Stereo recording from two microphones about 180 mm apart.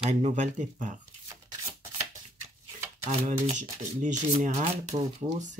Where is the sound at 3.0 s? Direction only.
40° right (ahead or behind).